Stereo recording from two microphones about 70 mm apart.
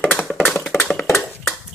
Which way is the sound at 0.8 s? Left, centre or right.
Centre.